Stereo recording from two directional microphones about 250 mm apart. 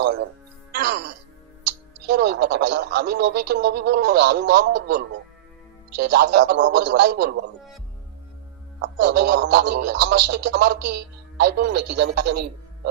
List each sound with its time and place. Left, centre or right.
0.7 s music: right
2.0 s speech: right
8.8 s speech: right